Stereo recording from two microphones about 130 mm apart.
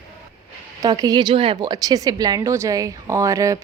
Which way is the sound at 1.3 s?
45° right (ahead or behind).